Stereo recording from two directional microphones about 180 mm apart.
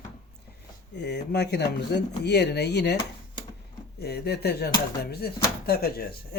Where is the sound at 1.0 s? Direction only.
70° left (ahead or behind).